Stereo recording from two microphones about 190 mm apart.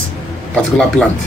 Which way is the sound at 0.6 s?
5° left (ahead or behind).